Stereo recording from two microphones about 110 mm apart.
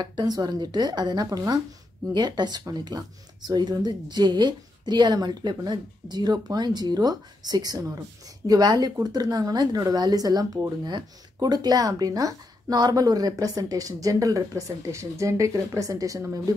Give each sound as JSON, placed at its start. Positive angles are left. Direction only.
{"t": 0.0, "sound": "a woman's voice", "side_deg": -40}